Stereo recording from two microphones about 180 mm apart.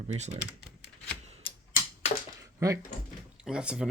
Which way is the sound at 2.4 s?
15° right (ahead or behind).